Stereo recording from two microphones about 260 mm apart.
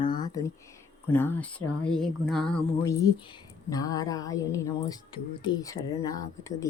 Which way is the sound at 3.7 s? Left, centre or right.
Centre.